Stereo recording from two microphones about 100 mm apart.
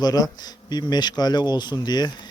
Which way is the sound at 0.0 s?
40° left (ahead or behind).